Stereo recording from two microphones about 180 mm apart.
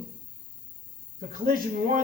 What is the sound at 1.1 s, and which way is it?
Speech, 50° right (ahead or behind).